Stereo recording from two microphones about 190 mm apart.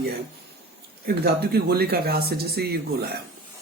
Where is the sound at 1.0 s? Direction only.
55° right (ahead or behind).